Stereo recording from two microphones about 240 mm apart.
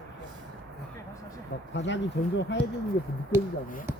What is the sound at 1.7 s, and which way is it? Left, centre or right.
Speech, left.